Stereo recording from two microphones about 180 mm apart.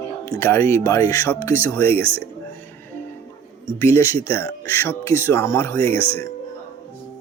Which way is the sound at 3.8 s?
15° left (ahead or behind).